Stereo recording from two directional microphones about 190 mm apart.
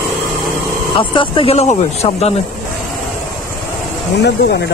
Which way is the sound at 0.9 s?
25° left (ahead or behind).